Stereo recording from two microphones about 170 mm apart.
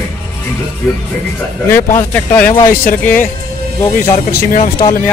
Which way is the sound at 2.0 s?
10° left (ahead or behind).